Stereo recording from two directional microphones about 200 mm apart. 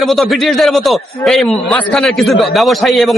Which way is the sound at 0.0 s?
Centre (ahead or behind).